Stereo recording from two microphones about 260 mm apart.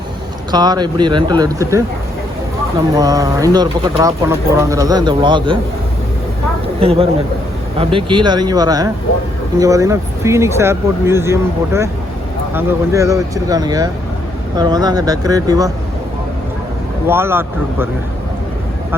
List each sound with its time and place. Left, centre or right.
0.5 s speech: centre
2.9 s speech: centre
6.7 s speech: right
17.1 s speech: centre